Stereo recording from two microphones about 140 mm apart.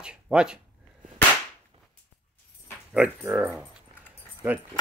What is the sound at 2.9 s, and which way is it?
Speech, 10° right (ahead or behind).